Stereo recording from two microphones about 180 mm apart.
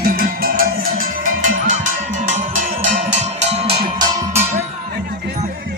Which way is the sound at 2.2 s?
40° right (ahead or behind).